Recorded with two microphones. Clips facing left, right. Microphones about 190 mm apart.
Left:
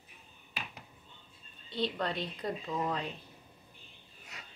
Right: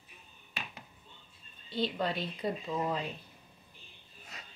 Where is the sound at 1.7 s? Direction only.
5° right (ahead or behind).